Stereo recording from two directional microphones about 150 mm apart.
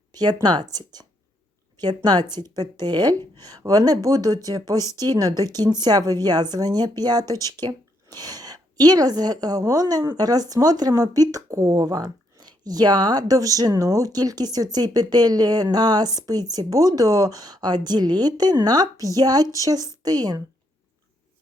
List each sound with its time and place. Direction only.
0.1 s a sound: 25° right (ahead or behind)
0.4 s speech: 25° right (ahead or behind)
4.9 s speech: 20° left (ahead or behind)
5.1 s a woman's voice: 25° right (ahead or behind)